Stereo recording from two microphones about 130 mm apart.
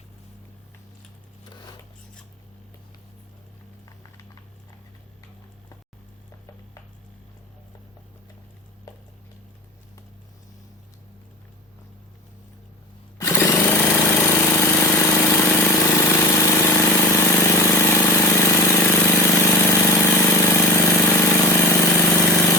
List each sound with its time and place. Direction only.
13.1 s jackhammer: 20° left (ahead or behind)